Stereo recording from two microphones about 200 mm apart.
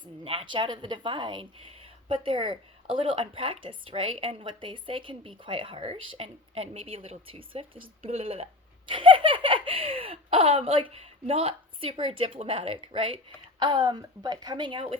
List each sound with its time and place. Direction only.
0.0 s laughter: 25° right (ahead or behind)